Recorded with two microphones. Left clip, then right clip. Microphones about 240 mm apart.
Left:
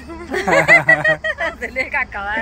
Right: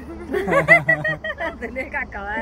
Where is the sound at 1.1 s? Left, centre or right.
Centre.